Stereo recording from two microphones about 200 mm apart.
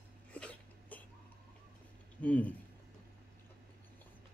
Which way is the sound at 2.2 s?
5° left (ahead or behind).